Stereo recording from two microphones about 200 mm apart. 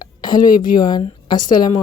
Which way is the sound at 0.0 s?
20° left (ahead or behind).